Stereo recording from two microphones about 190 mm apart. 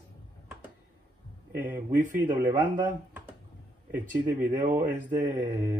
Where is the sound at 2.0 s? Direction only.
45° right (ahead or behind).